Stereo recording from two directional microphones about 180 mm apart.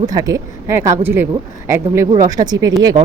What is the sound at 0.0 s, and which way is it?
Speech, 20° right (ahead or behind).